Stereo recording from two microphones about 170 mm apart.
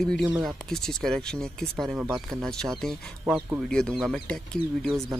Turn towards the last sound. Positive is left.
turn(degrees=0)  # may be behind; listen again after turning